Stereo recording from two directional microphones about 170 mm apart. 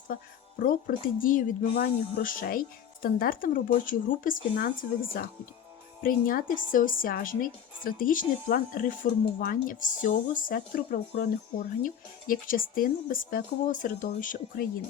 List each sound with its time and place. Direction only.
0.6 s speech: 55° left (ahead or behind)